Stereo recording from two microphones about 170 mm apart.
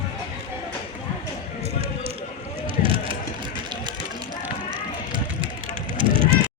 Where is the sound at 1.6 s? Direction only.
35° right (ahead or behind).